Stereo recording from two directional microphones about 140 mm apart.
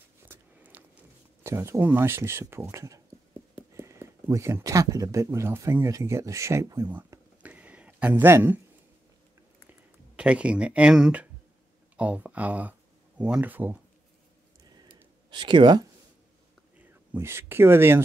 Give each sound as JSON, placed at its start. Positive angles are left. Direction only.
{"t": 0.3, "sound": "a sound", "side_deg": -15}
{"t": 1.4, "sound": "speech", "side_deg": -20}
{"t": 9.7, "sound": "speech", "side_deg": -10}
{"t": 15.3, "sound": "speech", "side_deg": -35}
{"t": 17.1, "sound": "speech", "side_deg": -15}